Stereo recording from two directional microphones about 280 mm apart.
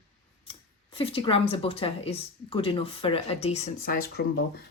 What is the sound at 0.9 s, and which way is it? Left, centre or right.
A woman's voice, centre.